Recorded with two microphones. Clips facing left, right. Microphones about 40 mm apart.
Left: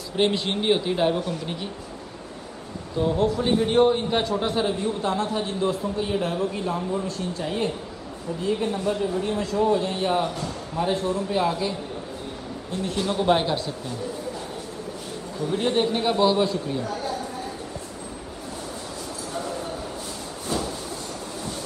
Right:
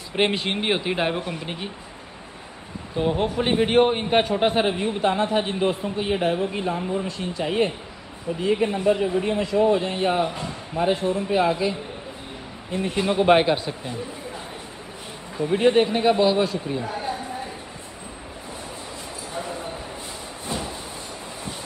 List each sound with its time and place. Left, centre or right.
0.1 s speech: right
3.0 s a man's voice: right
12.7 s speech: right
15.3 s speech: right
15.8 s speech: centre
16.8 s speech: right